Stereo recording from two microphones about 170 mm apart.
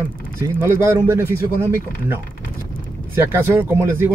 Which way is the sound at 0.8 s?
15° right (ahead or behind).